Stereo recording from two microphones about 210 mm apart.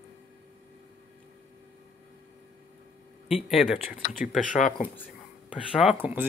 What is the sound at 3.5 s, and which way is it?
Speech, centre (ahead or behind).